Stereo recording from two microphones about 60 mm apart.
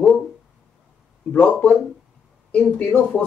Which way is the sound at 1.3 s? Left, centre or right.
Left.